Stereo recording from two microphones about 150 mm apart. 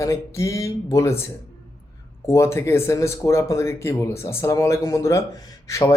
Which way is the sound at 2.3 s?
20° left (ahead or behind).